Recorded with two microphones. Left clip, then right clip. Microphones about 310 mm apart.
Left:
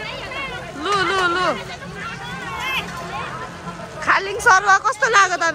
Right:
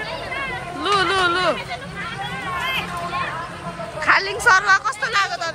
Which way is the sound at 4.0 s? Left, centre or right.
Centre.